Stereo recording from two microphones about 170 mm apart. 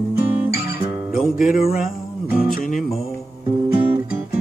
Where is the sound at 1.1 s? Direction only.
55° left (ahead or behind).